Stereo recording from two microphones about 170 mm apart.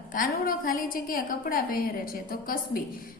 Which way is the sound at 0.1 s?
55° left (ahead or behind).